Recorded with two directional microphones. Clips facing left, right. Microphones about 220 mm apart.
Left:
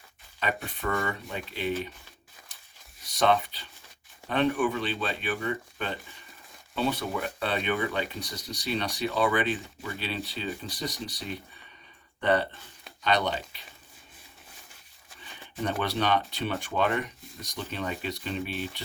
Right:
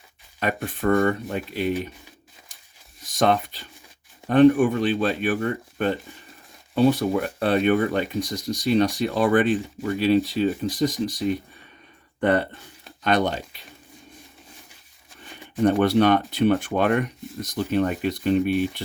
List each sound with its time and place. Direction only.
0.3 s speech: 50° right (ahead or behind)
3.1 s speech: 45° right (ahead or behind)
15.6 s speech: 50° right (ahead or behind)